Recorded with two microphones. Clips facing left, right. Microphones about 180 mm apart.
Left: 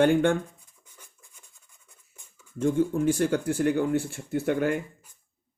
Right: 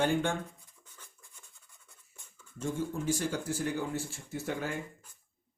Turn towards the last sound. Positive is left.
turn(degrees=60)  # may be behind; listen again after turning